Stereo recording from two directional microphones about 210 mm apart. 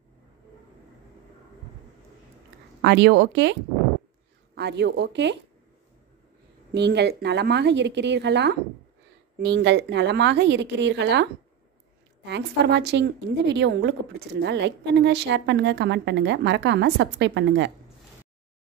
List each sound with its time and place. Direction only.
2.8 s a woman's voice: 55° right (ahead or behind)
4.6 s a woman's voice: 55° right (ahead or behind)
6.7 s a woman's voice: 55° right (ahead or behind)
12.3 s a woman's voice: 55° right (ahead or behind)